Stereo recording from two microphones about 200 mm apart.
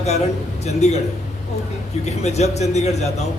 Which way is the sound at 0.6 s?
35° left (ahead or behind).